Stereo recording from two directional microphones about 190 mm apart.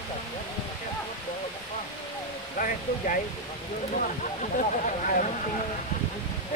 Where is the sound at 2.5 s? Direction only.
45° left (ahead or behind).